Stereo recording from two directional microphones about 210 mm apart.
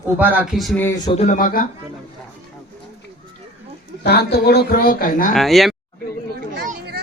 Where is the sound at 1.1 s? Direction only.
35° left (ahead or behind).